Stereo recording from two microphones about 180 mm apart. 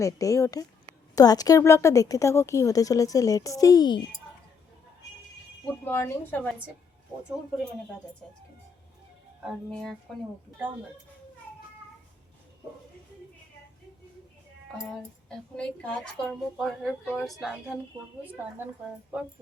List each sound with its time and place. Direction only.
0.0 s a woman's voice: 20° left (ahead or behind)
5.8 s speech: 15° left (ahead or behind)
9.4 s a woman's voice: centre (ahead or behind)
15.5 s a woman's voice: 5° left (ahead or behind)